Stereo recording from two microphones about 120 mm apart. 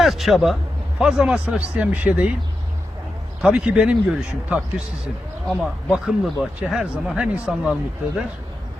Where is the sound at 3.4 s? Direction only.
10° right (ahead or behind).